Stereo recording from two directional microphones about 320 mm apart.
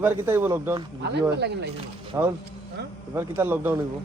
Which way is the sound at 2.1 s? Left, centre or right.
Centre.